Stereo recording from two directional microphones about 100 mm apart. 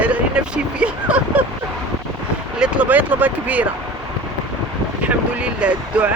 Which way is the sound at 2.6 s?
10° right (ahead or behind).